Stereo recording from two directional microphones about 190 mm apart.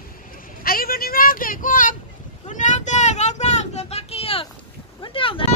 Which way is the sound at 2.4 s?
40° left (ahead or behind).